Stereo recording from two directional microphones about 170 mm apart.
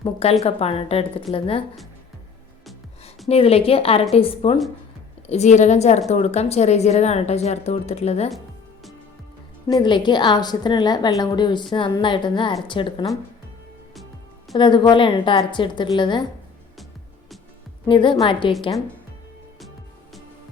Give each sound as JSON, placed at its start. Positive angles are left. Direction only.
{"t": 0.0, "sound": "speech", "side_deg": 35}
{"t": 3.2, "sound": "speech", "side_deg": 35}
{"t": 9.6, "sound": "a woman's voice", "side_deg": 25}
{"t": 14.5, "sound": "a woman's voice", "side_deg": 25}
{"t": 17.8, "sound": "a woman's voice", "side_deg": 30}